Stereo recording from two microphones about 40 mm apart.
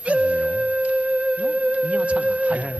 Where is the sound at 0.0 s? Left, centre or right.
Right.